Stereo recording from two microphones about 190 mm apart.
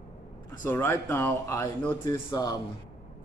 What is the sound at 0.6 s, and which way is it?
Speech, 10° left (ahead or behind).